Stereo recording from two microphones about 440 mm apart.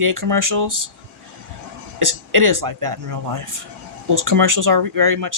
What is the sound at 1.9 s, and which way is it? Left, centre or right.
Speech, right.